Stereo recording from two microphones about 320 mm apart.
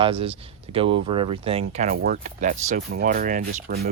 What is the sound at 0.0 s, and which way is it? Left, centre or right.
Speech, centre.